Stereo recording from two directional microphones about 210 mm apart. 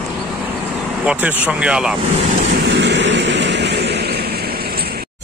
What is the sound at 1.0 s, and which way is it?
Speech, 5° right (ahead or behind).